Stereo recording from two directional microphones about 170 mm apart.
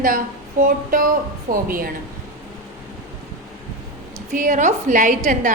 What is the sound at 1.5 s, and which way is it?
Speech, 60° right (ahead or behind).